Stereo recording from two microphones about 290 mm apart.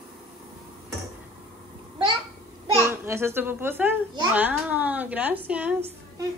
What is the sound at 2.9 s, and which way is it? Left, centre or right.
A child's voice, centre.